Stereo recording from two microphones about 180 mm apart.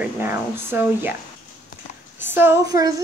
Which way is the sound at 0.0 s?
10° right (ahead or behind).